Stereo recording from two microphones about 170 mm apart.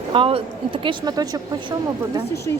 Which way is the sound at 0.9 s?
20° right (ahead or behind).